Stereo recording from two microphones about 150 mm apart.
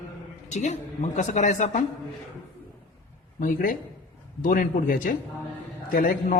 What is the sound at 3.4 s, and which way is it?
A man's voice, 65° left (ahead or behind).